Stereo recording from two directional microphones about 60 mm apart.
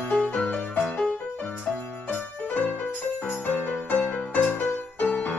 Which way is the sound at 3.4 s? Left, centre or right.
Left.